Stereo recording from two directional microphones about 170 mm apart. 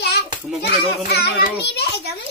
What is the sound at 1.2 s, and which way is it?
Speech, 75° left (ahead or behind).